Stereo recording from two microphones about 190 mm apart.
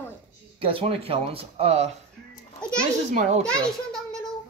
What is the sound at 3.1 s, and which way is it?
Speech, 35° right (ahead or behind).